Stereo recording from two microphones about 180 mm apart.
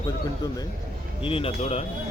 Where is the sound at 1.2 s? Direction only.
30° left (ahead or behind).